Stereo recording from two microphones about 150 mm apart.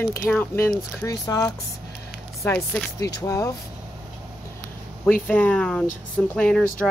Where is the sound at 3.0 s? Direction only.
20° left (ahead or behind).